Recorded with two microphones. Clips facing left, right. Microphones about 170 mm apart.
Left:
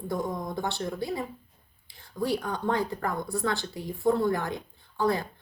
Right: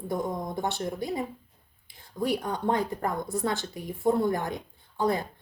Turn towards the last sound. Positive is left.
turn(degrees=-20)  # may be behind; listen again after turning